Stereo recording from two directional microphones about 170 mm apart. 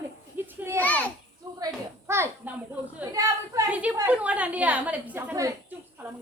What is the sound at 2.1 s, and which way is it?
A woman's voice, 15° right (ahead or behind).